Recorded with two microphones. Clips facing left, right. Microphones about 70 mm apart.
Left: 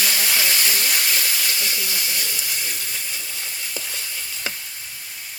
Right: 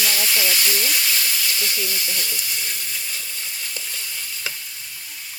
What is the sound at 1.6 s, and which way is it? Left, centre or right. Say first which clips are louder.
Speech: even; centre.